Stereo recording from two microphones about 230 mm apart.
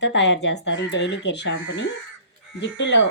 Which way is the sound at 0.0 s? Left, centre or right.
Left.